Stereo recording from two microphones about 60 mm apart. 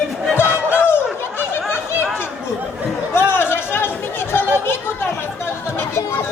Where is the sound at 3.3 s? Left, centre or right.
Left.